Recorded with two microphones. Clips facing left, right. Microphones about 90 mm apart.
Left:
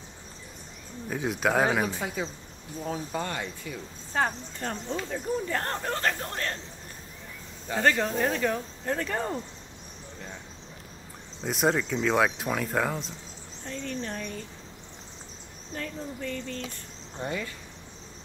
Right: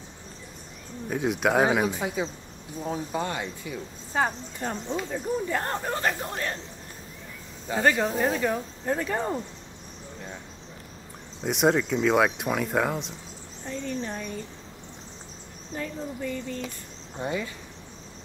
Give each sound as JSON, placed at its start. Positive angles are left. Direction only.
{"t": 1.1, "sound": "speech", "side_deg": 0}
{"t": 1.9, "sound": "speech", "side_deg": -20}
{"t": 2.8, "sound": "cricket", "side_deg": -20}
{"t": 4.2, "sound": "speech", "side_deg": -10}
{"t": 7.7, "sound": "speech", "side_deg": -15}
{"t": 11.4, "sound": "speech", "side_deg": 0}
{"t": 13.7, "sound": "speech", "side_deg": -15}
{"t": 15.7, "sound": "speech", "side_deg": -10}